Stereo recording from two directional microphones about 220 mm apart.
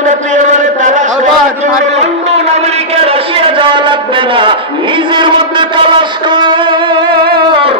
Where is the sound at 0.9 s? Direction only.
35° right (ahead or behind).